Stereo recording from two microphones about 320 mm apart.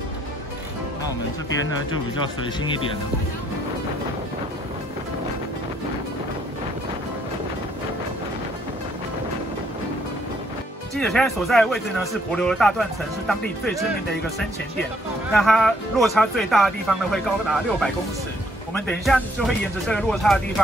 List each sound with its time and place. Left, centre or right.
11.0 s speech: centre
15.3 s speech: centre